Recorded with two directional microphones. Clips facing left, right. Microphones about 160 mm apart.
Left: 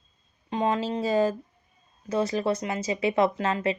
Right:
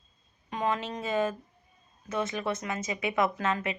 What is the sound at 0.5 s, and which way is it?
Speech, 30° left (ahead or behind).